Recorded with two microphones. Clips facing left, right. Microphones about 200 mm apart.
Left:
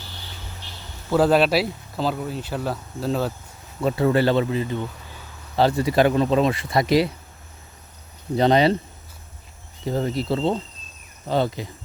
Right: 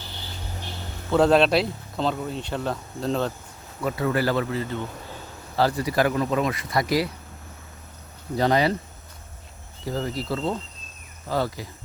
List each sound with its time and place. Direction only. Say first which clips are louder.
1.1 s speech: even; 5° left (ahead or behind)
3.8 s speech: left 5 dB; 25° left (ahead or behind)
8.4 s speech: left 4 dB; 25° left (ahead or behind)
9.8 s speech: left 4 dB; 25° left (ahead or behind)